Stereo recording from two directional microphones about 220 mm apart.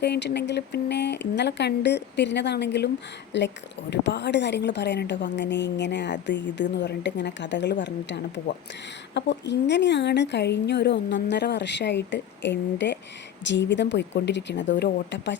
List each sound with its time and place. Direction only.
0.0 s a woman's voice: 50° left (ahead or behind)